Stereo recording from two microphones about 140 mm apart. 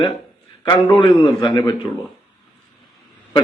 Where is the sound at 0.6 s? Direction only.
35° left (ahead or behind).